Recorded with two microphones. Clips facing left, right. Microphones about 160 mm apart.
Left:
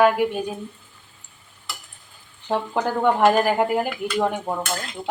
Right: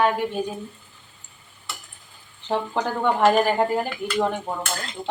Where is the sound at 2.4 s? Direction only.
10° left (ahead or behind).